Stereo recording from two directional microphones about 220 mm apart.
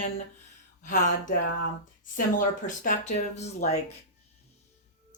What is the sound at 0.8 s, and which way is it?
Speech, 35° left (ahead or behind).